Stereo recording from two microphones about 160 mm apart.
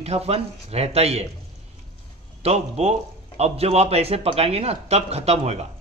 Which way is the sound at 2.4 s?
40° right (ahead or behind).